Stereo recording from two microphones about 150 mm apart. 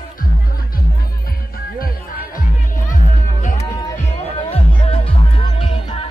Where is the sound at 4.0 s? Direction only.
40° left (ahead or behind).